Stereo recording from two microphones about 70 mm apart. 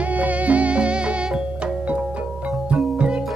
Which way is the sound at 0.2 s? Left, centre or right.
Right.